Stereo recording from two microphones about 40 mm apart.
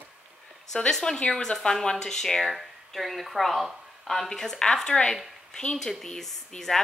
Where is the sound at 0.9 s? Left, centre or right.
Centre.